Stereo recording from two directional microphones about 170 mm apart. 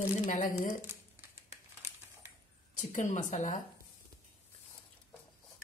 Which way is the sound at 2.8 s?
50° left (ahead or behind).